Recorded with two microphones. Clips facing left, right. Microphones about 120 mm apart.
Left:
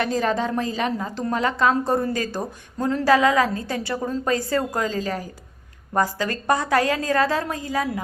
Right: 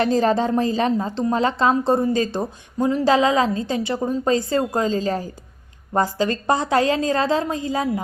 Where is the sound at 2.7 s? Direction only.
15° right (ahead or behind).